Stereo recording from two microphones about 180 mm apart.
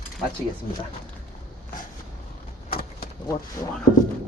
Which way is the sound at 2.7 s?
55° left (ahead or behind).